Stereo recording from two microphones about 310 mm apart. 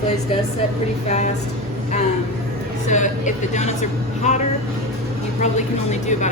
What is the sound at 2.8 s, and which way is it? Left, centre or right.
Speech, left.